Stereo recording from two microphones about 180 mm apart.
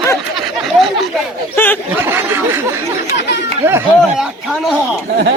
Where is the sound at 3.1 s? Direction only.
70° left (ahead or behind).